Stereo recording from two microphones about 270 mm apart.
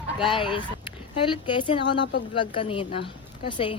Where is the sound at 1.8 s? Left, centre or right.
Left.